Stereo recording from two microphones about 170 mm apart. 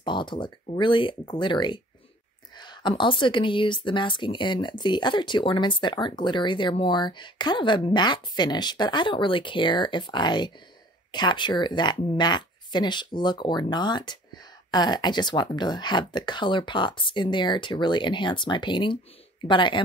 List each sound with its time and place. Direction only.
0.0 s speech: 25° left (ahead or behind)